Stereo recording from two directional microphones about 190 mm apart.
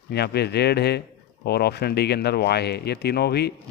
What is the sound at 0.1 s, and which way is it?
Speech, 60° left (ahead or behind).